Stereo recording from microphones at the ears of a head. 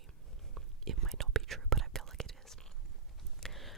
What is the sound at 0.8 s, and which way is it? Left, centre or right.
Whispering, right.